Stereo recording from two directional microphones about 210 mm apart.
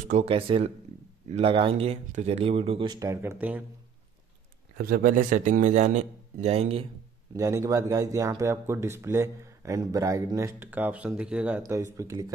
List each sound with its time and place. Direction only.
0.1 s speech: 25° right (ahead or behind); by 3.6 s 10° right (ahead or behind)
4.7 s a man's voice: 45° right (ahead or behind); by 6.9 s 30° right (ahead or behind)
7.3 s speech: 15° right (ahead or behind)